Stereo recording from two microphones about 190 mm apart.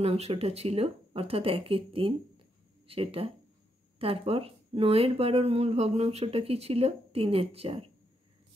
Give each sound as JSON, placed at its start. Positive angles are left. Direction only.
{"t": 0.0, "sound": "speech", "side_deg": -30}